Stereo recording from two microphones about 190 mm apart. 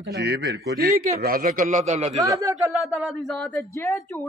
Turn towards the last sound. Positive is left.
turn(degrees=15)  # may be behind; listen again after turning